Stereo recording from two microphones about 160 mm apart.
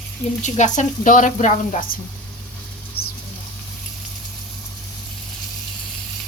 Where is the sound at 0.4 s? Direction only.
50° left (ahead or behind).